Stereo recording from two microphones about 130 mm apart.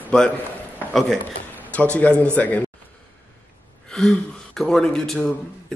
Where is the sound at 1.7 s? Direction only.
10° left (ahead or behind).